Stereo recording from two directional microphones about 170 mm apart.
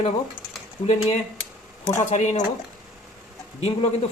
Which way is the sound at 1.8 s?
15° left (ahead or behind).